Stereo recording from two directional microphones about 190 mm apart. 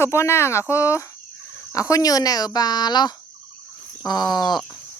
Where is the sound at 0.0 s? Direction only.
15° left (ahead or behind).